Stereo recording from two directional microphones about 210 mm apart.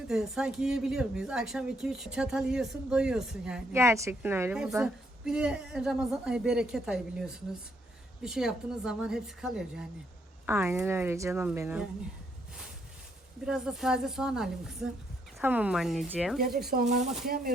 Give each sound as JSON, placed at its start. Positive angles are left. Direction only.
{"t": 0.1, "sound": "a woman's voice", "side_deg": -5}
{"t": 13.4, "sound": "speech", "side_deg": -5}
{"t": 16.6, "sound": "speech", "side_deg": -40}
{"t": 17.2, "sound": "speech", "side_deg": -45}